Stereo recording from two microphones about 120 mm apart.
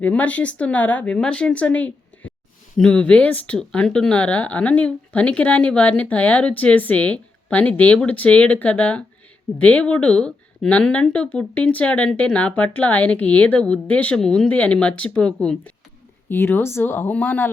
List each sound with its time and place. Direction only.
0.0 s speech: 10° left (ahead or behind)